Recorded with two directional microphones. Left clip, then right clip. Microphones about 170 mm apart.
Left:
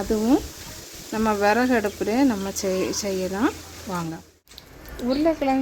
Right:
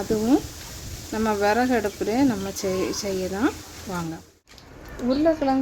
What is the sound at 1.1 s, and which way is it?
Speech, 20° left (ahead or behind).